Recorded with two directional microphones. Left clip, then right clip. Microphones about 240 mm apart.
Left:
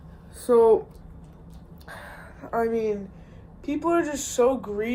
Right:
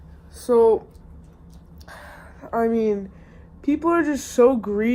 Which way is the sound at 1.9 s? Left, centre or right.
Right.